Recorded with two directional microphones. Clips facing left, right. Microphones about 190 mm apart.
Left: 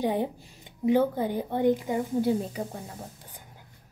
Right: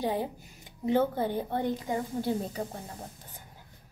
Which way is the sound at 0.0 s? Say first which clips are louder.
Left 3 dB; 15° left (ahead or behind).